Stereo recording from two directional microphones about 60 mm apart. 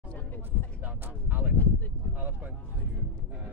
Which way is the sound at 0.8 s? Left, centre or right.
Right.